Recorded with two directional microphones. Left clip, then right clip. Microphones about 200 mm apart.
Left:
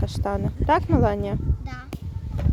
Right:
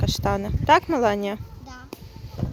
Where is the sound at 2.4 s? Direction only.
10° left (ahead or behind).